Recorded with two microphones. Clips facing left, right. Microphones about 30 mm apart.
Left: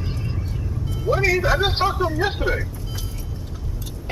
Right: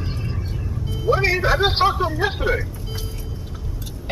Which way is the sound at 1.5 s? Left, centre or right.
Centre.